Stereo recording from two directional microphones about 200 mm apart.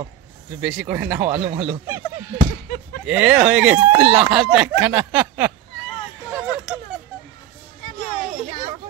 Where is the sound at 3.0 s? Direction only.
5° right (ahead or behind).